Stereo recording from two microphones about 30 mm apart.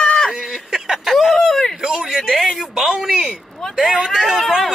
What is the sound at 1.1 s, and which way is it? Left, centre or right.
Speech, centre.